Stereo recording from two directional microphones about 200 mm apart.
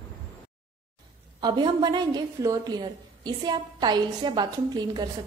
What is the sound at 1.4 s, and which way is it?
A woman's voice, 20° right (ahead or behind).